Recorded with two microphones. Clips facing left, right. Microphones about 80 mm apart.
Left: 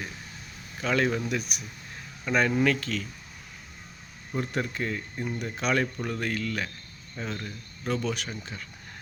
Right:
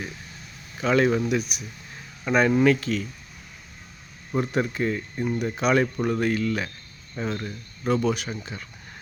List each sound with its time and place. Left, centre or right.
0.8 s speech: centre
4.4 s speech: centre